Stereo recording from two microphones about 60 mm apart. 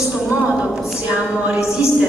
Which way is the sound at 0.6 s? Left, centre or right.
Centre.